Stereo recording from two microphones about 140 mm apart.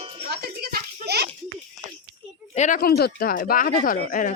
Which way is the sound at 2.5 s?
65° left (ahead or behind).